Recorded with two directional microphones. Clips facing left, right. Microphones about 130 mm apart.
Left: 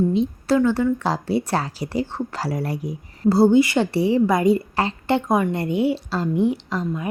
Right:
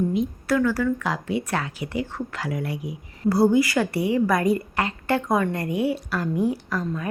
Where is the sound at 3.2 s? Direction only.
25° left (ahead or behind).